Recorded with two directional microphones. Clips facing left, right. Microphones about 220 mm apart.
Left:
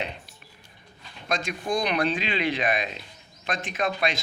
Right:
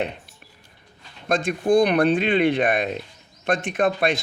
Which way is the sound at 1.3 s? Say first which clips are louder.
Right 9 dB; 55° right (ahead or behind).